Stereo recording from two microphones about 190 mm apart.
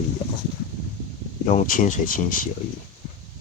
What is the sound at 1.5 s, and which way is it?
Speech, 40° left (ahead or behind).